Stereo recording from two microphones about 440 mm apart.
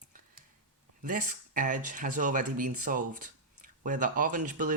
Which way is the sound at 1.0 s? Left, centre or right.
Centre.